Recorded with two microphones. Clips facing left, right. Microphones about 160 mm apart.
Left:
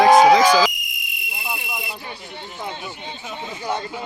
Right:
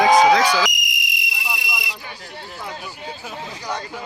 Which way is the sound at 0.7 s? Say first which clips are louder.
Right 5 dB; 85° right.